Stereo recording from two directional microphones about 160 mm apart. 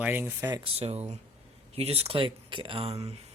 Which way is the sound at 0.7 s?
40° right (ahead or behind).